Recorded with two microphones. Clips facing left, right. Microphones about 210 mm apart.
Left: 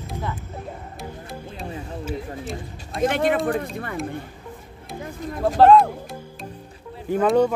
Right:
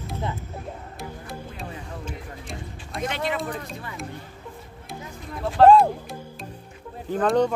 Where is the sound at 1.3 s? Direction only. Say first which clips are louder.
Left 2 dB; 5° left (ahead or behind).